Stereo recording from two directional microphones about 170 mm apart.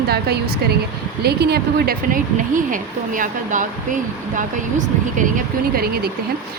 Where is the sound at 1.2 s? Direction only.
70° right (ahead or behind).